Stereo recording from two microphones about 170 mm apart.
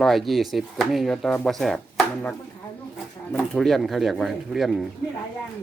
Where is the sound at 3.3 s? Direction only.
5° left (ahead or behind).